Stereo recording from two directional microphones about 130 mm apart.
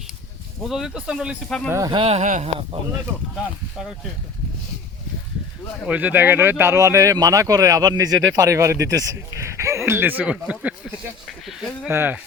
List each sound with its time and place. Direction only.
0.7 s speech: 5° right (ahead or behind)
1.5 s speech: 5° left (ahead or behind)
1.9 s speech: 45° right (ahead or behind)
2.2 s speech: 75° right (ahead or behind)
5.8 s speech: 10° right (ahead or behind)
11.3 s speech: centre (ahead or behind)
11.9 s speech: 15° right (ahead or behind)